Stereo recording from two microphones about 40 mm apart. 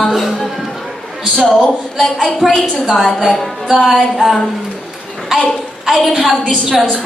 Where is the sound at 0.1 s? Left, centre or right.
Centre.